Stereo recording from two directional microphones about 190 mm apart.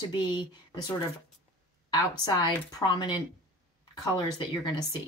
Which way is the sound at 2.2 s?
20° left (ahead or behind).